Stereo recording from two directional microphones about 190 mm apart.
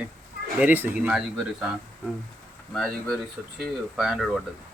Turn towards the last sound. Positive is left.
turn(degrees=0)  # may be behind; listen again after turning